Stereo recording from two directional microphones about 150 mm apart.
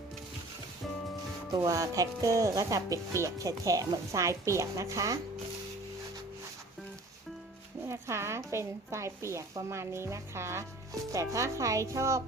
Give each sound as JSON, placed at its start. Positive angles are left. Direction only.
{"t": 1.5, "sound": "speech", "side_deg": -20}
{"t": 7.9, "sound": "a woman's voice", "side_deg": -20}